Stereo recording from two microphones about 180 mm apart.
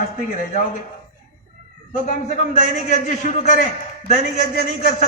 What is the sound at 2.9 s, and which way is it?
Speech, 45° left (ahead or behind).